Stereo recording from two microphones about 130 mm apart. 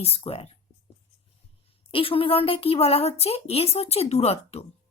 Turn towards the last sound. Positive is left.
turn(degrees=55)  # may be behind; listen again after turning